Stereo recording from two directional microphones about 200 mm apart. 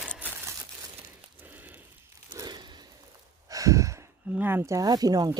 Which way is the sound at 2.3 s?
20° right (ahead or behind).